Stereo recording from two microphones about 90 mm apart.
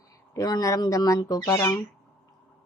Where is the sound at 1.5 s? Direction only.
30° left (ahead or behind).